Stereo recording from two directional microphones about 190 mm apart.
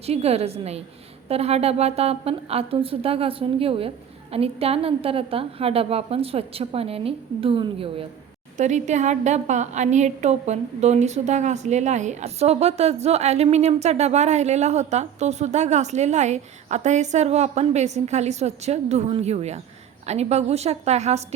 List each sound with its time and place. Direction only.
0.0 s a woman's voice: 35° right (ahead or behind)
8.5 s a woman's voice: 40° right (ahead or behind)